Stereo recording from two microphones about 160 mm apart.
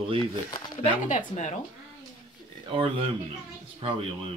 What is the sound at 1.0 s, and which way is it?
Speech, 50° left (ahead or behind).